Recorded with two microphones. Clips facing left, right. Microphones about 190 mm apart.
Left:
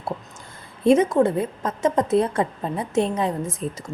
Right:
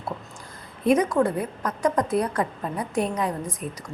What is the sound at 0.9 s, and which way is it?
A woman's voice, 25° left (ahead or behind).